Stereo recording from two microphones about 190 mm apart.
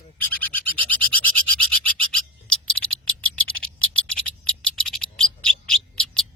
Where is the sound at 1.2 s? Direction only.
90° right.